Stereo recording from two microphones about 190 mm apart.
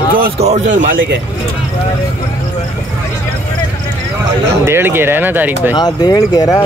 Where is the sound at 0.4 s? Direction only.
40° right (ahead or behind).